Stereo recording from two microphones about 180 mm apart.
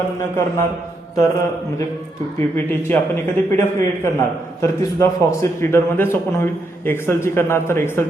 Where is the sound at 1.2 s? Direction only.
15° left (ahead or behind).